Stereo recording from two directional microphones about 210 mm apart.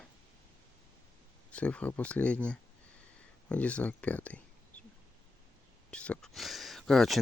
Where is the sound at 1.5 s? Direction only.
5° left (ahead or behind).